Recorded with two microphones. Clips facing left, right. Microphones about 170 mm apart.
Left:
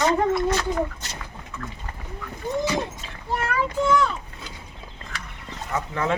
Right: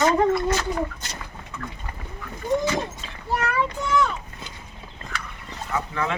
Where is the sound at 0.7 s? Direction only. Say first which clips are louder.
Left 1 dB; 20° left (ahead or behind).